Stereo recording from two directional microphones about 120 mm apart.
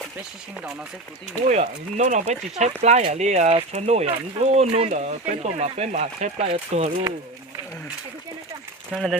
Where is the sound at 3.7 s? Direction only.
65° right (ahead or behind).